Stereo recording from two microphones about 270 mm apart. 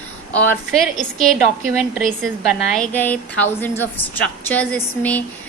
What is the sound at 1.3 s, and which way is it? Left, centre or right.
A woman's voice, centre.